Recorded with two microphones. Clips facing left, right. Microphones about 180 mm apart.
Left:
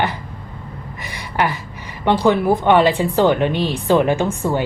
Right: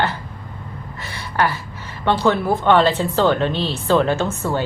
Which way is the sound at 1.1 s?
15° left (ahead or behind).